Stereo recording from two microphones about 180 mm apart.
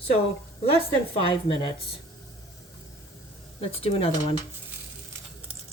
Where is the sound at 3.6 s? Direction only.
30° left (ahead or behind).